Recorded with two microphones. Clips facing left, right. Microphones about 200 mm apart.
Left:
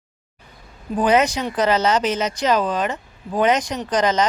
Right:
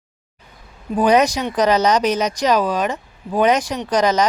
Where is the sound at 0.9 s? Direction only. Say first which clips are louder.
Right 2 dB; 15° right (ahead or behind).